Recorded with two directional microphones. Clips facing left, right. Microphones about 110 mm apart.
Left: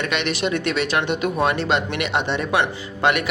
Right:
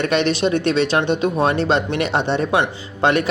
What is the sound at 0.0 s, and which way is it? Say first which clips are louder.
Speech: right 5 dB; 35° right (ahead or behind).